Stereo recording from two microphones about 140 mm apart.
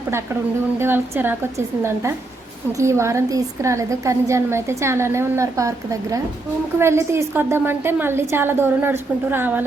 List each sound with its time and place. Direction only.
0.8 s a woman's voice: 15° right (ahead or behind)